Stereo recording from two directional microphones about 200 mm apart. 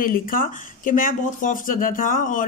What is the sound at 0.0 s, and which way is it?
Speech, 45° left (ahead or behind).